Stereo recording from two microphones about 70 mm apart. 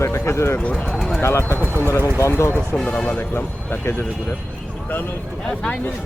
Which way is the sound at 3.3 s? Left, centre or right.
Left.